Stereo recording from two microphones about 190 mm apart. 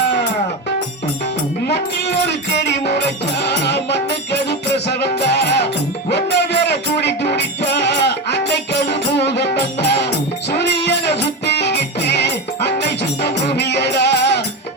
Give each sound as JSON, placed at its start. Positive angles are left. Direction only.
{"t": 1.6, "sound": "music", "side_deg": 60}